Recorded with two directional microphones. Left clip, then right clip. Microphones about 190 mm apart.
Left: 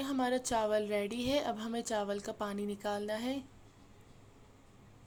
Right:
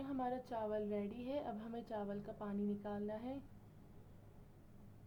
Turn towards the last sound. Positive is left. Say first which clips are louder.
# left 9 dB
turn(degrees=35)  # may be behind; listen again after turning